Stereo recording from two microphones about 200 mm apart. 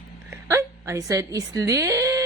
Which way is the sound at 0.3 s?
15° right (ahead or behind).